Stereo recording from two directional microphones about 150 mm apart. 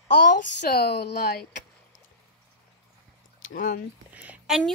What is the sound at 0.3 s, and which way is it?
Speech, 90° left.